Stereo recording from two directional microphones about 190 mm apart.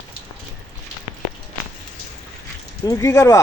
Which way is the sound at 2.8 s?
15° left (ahead or behind).